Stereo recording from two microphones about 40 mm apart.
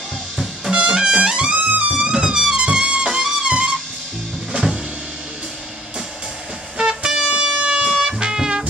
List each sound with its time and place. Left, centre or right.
0.7 s trumpet: right
1.7 s music: right
2.0 s music: right
4.5 s music: centre
6.8 s a sound: centre
8.0 s music: centre